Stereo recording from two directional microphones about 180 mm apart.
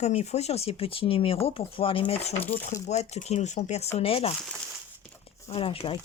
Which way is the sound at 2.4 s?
10° left (ahead or behind).